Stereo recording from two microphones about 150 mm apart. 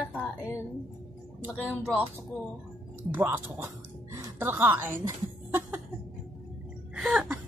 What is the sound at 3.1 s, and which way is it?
Speech, 10° right (ahead or behind).